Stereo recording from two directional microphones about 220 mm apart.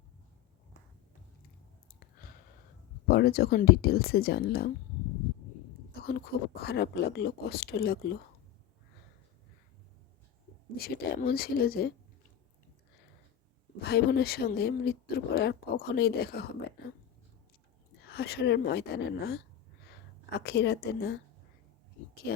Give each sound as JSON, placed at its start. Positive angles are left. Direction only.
{"t": 3.1, "sound": "speech", "side_deg": 45}
{"t": 6.1, "sound": "speech", "side_deg": 45}
{"t": 10.8, "sound": "speech", "side_deg": 45}
{"t": 13.8, "sound": "speech", "side_deg": 45}
{"t": 18.0, "sound": "speech", "side_deg": 45}
{"t": 20.4, "sound": "speech", "side_deg": 50}